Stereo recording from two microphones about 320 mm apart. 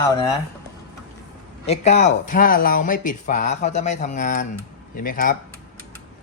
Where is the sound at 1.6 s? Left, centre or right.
Centre.